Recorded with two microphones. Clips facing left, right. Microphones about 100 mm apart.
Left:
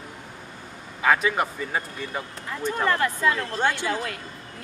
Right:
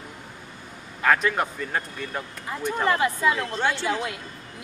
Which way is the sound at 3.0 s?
15° right (ahead or behind).